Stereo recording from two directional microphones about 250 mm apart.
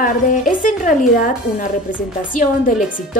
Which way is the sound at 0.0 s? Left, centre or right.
Left.